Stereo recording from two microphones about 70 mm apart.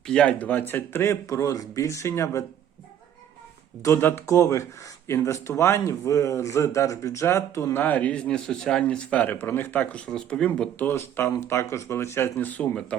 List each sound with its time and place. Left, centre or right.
0.0 s speech: centre; by 2.4 s left
3.8 s speech: left
7.8 s speech: left
10.1 s speech: centre
10.9 s speech: left
12.4 s speech: left
12.9 s speech: centre